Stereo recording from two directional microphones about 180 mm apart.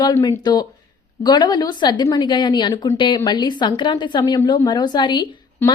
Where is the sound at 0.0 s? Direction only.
20° left (ahead or behind).